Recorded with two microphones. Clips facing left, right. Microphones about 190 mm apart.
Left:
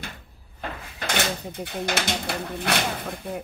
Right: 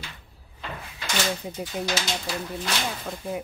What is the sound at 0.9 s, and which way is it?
Speech, 60° left (ahead or behind).